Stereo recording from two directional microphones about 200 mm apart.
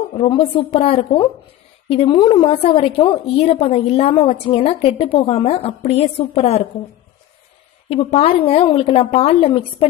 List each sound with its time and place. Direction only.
0.2 s a woman's voice: 25° left (ahead or behind)
7.9 s a woman's voice: 30° left (ahead or behind)